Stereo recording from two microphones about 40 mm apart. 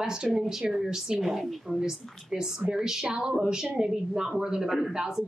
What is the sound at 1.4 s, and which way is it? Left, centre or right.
Speech, centre.